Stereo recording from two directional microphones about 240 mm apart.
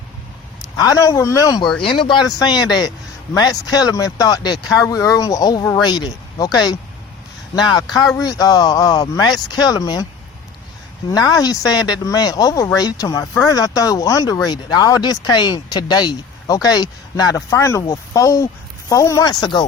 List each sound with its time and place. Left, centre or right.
0.8 s speech: centre
11.1 s speech: centre